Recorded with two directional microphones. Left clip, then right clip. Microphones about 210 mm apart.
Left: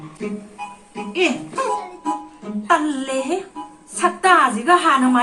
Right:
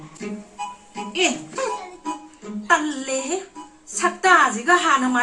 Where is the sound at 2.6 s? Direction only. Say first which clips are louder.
Left 2 dB; 40° left (ahead or behind).